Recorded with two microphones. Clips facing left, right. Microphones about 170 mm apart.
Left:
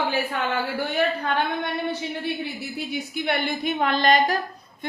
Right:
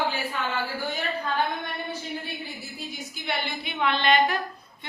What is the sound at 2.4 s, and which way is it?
A woman's voice, 65° left (ahead or behind).